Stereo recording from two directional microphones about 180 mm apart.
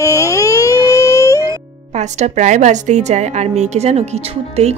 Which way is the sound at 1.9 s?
40° right (ahead or behind).